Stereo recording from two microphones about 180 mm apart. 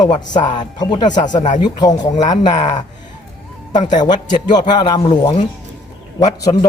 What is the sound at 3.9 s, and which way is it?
A man's voice, 25° left (ahead or behind).